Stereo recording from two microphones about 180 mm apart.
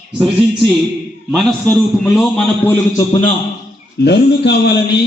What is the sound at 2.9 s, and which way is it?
Speech, 20° left (ahead or behind).